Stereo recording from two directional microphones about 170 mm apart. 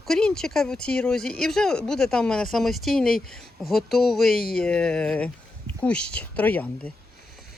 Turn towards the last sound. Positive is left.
turn(degrees=10)  # may be behind; listen again after turning